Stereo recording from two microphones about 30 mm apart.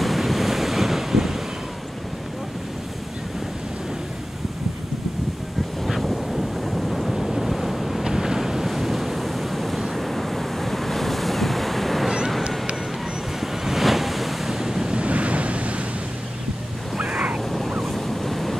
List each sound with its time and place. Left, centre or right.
0.0 s waves: centre
5.9 s waves: centre
8.0 s waves: centre
9.8 s vehicle: centre
10.0 s waves: centre
13.4 s waves: centre
14.5 s waves: centre
15.0 s waves: right
17.0 s a sound: right
17.6 s waves: centre
17.9 s waves: centre